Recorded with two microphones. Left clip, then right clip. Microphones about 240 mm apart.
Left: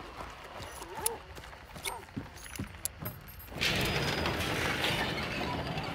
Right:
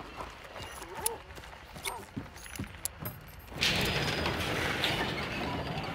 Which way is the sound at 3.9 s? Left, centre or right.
Centre.